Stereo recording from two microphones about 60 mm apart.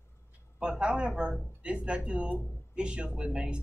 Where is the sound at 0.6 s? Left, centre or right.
Centre.